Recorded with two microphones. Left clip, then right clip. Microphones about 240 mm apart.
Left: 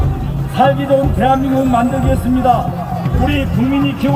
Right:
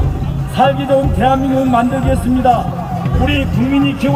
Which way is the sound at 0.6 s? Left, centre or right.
Right.